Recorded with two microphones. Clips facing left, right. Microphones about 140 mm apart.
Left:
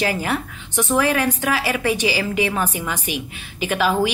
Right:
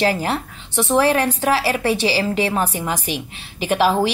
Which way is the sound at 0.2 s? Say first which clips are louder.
Right 1 dB; 35° right (ahead or behind).